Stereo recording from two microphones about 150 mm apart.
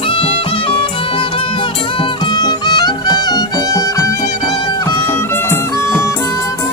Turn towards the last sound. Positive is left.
turn(degrees=20)  # may be behind; listen again after turning